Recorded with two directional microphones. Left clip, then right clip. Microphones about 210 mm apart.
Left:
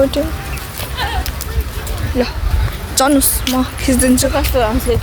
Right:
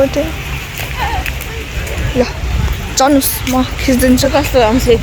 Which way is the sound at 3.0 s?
5° left (ahead or behind).